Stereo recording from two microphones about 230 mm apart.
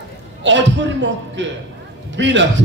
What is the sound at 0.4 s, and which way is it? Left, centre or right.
A man's voice, right.